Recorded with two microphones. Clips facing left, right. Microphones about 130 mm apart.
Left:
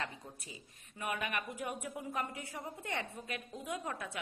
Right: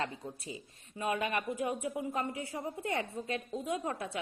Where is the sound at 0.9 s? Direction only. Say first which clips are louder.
Right 5 dB; 25° right (ahead or behind).